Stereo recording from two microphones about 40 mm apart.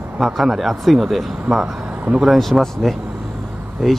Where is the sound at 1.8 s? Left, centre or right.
Right.